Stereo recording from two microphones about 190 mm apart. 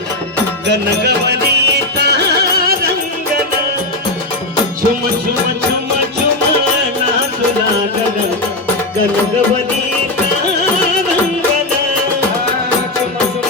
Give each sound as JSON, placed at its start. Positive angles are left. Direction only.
{"t": 0.7, "sound": "music", "side_deg": -60}